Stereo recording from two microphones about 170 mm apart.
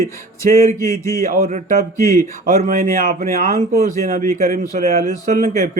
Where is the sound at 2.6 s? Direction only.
55° right (ahead or behind).